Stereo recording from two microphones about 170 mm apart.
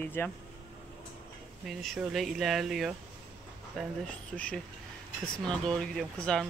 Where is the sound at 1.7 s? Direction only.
Centre (ahead or behind).